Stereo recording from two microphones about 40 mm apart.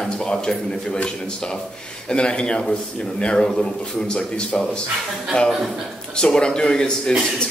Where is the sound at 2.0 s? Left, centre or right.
Left.